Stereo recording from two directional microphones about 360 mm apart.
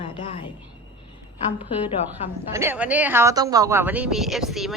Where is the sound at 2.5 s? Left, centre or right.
Centre.